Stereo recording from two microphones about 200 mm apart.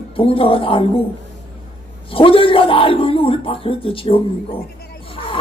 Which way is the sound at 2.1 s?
25° left (ahead or behind).